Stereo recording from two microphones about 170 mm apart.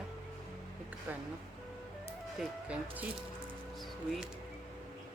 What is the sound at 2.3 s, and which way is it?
Speech, 10° right (ahead or behind).